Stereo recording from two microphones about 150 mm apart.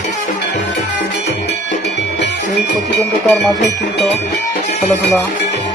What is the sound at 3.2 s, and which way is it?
Speech, centre (ahead or behind).